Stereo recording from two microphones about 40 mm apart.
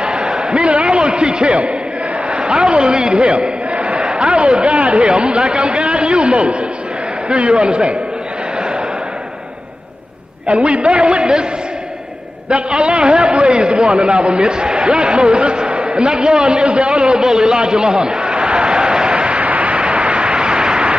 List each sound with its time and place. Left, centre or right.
0.0 s a man's voice: right
10.4 s a man's voice: right
12.4 s a man's voice: right
17.2 s a sound: centre